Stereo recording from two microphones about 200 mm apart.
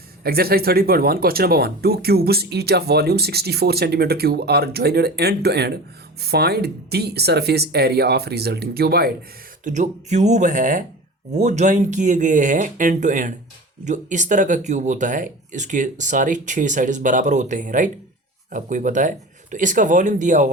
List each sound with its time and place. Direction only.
0.2 s speech: 50° right (ahead or behind)
9.6 s speech: 35° right (ahead or behind)